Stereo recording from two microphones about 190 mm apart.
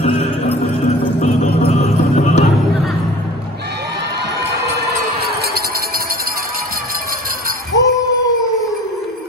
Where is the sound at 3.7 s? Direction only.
60° right (ahead or behind).